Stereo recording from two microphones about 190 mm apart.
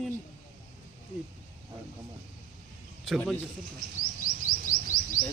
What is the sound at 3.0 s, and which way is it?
Speech, 5° left (ahead or behind).